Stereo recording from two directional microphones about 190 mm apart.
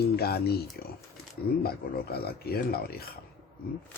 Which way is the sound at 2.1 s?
55° left (ahead or behind).